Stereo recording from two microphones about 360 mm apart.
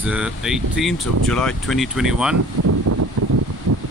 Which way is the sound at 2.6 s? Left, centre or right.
Right.